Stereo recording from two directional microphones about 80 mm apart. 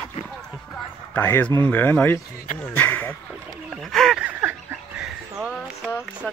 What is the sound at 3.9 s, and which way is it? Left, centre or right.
Speech, centre.